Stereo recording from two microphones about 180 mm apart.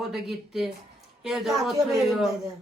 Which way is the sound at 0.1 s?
Centre (ahead or behind).